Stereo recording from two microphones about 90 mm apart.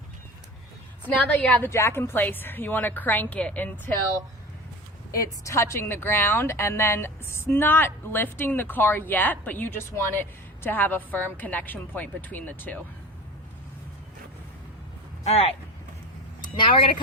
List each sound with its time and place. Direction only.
1.0 s a woman's voice: 15° left (ahead or behind)
5.1 s a woman's voice: 40° left (ahead or behind); by 12.8 s 20° left (ahead or behind)
16.4 s speech: 65° left (ahead or behind)